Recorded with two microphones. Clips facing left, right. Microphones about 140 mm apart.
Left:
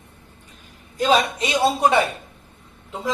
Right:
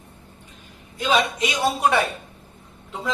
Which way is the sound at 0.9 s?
40° left (ahead or behind).